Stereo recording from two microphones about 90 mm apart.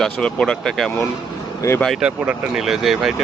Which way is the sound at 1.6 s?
35° left (ahead or behind).